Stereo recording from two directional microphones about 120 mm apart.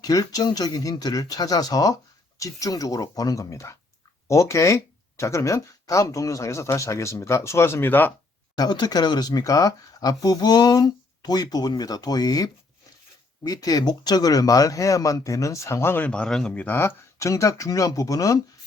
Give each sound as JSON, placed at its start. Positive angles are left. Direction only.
{"t": 0.0, "sound": "speech", "side_deg": 30}
{"t": 8.5, "sound": "speech", "side_deg": 35}
{"t": 16.0, "sound": "speech", "side_deg": 10}